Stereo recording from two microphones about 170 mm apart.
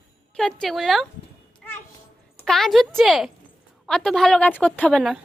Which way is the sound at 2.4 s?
Centre (ahead or behind).